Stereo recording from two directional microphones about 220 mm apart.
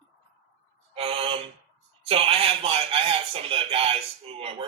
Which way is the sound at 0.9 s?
25° right (ahead or behind).